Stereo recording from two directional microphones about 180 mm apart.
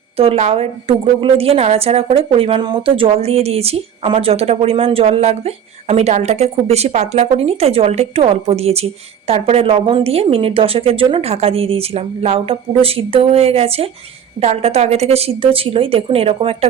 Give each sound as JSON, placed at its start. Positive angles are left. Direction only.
{"t": 0.2, "sound": "a woman's voice", "side_deg": -35}